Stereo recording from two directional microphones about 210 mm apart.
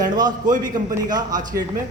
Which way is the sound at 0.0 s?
20° right (ahead or behind).